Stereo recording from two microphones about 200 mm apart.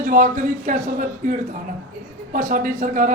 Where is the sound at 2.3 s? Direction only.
40° right (ahead or behind).